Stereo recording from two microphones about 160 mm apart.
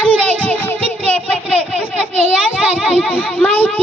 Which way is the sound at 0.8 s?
40° right (ahead or behind).